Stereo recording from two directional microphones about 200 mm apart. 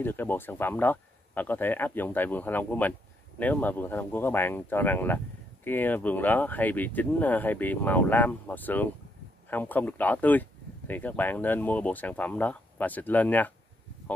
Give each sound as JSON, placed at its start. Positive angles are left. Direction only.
{"t": 0.0, "sound": "speech", "side_deg": 10}